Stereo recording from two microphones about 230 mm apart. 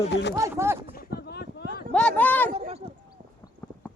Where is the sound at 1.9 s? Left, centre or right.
Centre.